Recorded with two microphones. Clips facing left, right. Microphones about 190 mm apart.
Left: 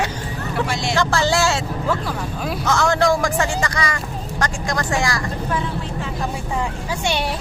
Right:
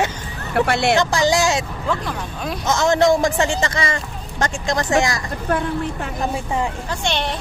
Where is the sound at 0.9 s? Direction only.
15° right (ahead or behind).